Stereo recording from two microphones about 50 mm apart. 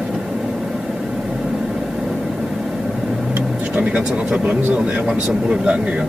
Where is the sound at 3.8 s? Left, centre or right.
Right.